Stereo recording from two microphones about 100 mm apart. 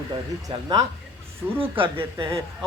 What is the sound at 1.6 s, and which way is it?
Speech, 65° right (ahead or behind).